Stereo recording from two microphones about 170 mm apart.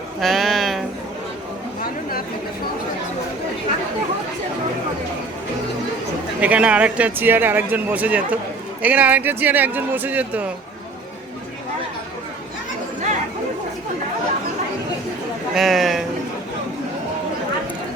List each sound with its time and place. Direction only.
0.2 s music: centre (ahead or behind)
1.8 s chatter: 60° left (ahead or behind)
6.4 s speech: 5° right (ahead or behind)
15.5 s a man's voice: centre (ahead or behind)